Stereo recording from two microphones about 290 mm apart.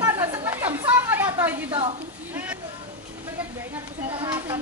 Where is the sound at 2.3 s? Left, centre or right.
Centre.